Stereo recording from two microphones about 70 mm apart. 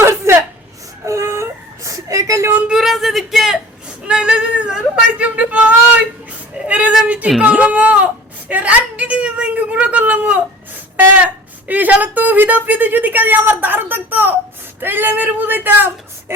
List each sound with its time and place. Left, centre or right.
0.3 s chuckle: right
1.0 s whimper: right
2.6 s speech: centre
4.0 s yodeling: centre
5.2 s a woman's voice: right
6.7 s a sound: centre
7.4 s speech: centre
11.7 s a woman's voice: right